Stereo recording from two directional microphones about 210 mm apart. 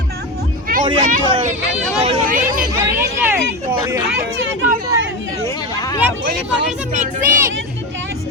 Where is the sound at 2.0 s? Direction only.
25° right (ahead or behind).